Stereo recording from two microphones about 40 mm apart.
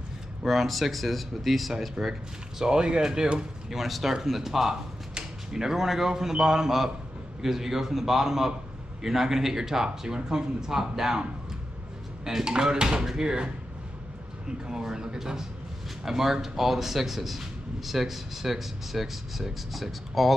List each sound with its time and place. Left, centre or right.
0.4 s speech: centre
2.6 s speech: centre
3.7 s speech: centre
12.4 s speech: centre
14.7 s speech: centre